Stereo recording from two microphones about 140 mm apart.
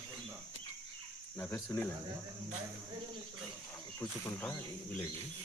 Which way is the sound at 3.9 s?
15° left (ahead or behind).